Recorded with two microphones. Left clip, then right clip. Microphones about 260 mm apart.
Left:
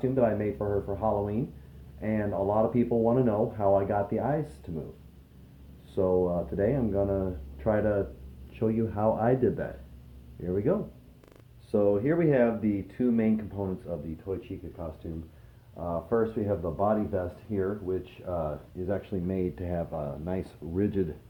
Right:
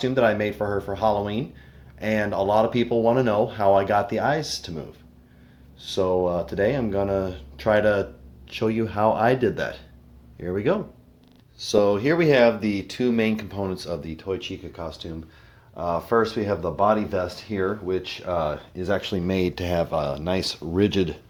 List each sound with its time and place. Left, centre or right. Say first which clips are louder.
0.0 s speech: right 6 dB; right
5.8 s speech: right 4 dB; right
11.7 s speech: right 6 dB; right
14.3 s speech: right 6 dB; right
15.7 s speech: right 7 dB; right